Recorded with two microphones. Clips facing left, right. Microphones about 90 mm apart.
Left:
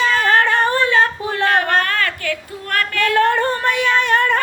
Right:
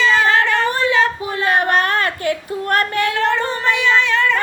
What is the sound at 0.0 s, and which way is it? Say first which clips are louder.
Singing: even; 55° left (ahead or behind).